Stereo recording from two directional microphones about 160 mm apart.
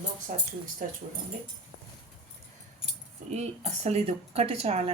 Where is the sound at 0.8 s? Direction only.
60° right (ahead or behind).